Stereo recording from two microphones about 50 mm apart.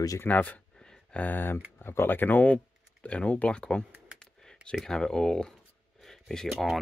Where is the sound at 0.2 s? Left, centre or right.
Left.